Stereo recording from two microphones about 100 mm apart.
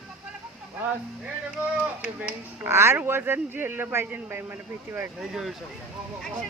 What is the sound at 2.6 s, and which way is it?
A man's voice, 25° right (ahead or behind).